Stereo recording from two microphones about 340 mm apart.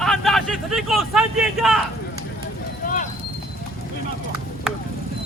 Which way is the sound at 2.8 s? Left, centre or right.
Left.